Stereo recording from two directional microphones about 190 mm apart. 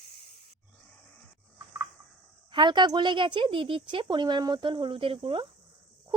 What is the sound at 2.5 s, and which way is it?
Speech, 25° right (ahead or behind).